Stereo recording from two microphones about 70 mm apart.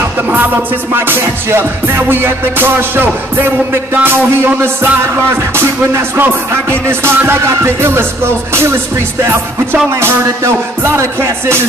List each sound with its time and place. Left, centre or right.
0.9 s music: right